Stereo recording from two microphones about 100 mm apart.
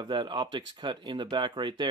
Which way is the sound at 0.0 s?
50° right (ahead or behind).